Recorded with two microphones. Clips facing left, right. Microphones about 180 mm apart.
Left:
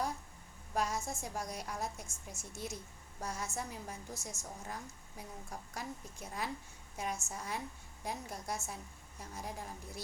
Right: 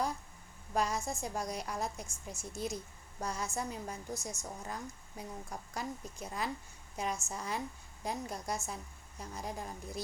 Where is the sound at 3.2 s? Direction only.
5° left (ahead or behind).